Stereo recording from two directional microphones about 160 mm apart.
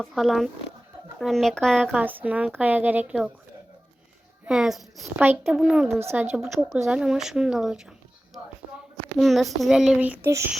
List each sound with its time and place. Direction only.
0.0 s a child's voice: centre (ahead or behind)
2.0 s a woman's voice: 10° right (ahead or behind)
4.4 s a child's voice: 5° right (ahead or behind)
6.0 s a woman's voice: 15° right (ahead or behind)